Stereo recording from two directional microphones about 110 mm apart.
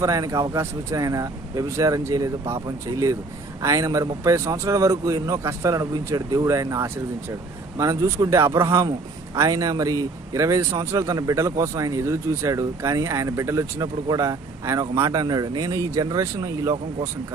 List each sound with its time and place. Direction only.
0.0 s speech: 30° right (ahead or behind)